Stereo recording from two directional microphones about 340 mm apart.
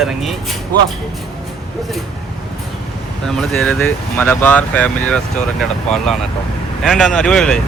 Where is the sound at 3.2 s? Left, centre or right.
Centre.